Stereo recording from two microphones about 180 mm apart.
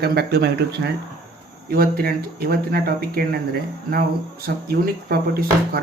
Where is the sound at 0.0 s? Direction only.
60° right (ahead or behind).